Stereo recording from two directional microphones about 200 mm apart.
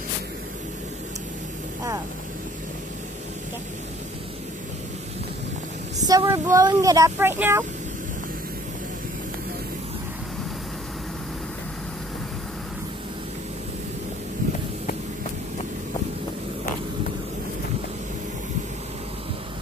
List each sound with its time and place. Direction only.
6.0 s speech: 15° right (ahead or behind)